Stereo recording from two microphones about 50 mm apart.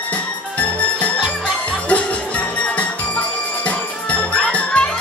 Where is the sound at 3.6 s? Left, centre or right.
Left.